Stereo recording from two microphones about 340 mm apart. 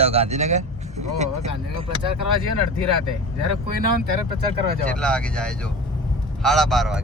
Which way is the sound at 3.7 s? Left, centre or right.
Right.